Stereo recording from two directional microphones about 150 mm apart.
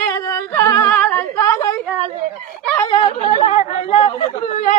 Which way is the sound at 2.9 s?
35° left (ahead or behind).